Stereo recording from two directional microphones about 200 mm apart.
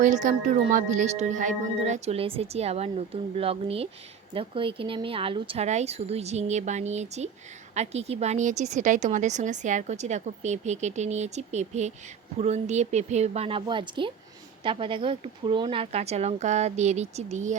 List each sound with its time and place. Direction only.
0.0 s a woman's voice: 40° right (ahead or behind)